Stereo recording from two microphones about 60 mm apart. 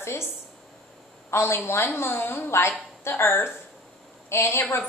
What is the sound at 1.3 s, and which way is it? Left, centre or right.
A woman's voice, left.